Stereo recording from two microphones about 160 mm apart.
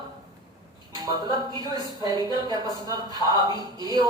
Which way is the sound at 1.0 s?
25° right (ahead or behind).